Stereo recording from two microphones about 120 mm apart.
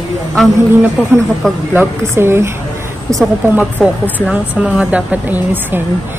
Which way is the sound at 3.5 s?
15° right (ahead or behind).